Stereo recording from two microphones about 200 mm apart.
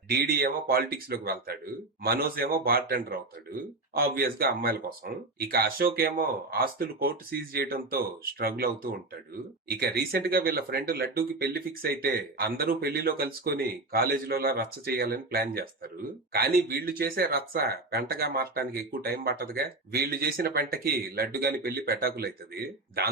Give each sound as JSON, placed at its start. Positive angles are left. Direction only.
{"t": 0.1, "sound": "speech", "side_deg": -50}